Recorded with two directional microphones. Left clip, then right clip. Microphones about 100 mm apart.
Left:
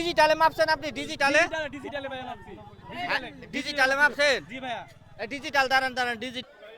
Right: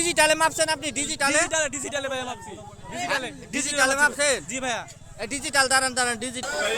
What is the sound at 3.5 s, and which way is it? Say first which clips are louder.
Speech: right 2 dB; 15° left (ahead or behind).